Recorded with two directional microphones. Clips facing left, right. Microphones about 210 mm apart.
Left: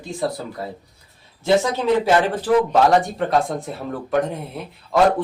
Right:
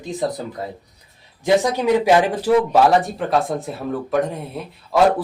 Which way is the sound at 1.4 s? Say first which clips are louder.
Right 1 dB; 15° right (ahead or behind).